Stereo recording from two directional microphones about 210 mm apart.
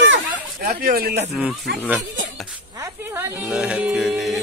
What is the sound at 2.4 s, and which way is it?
Music, 15° right (ahead or behind).